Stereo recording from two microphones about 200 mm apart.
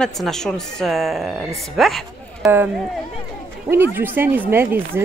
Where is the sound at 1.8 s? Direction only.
Centre (ahead or behind).